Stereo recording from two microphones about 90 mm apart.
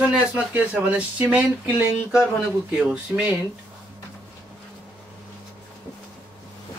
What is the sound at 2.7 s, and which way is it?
Speech, 15° right (ahead or behind).